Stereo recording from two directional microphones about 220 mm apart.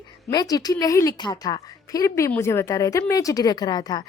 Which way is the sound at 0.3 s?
15° left (ahead or behind).